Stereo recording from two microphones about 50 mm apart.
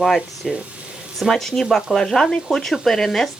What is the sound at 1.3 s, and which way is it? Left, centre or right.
Speech, centre.